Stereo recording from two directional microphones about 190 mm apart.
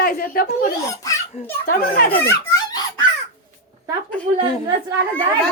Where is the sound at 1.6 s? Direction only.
50° left (ahead or behind).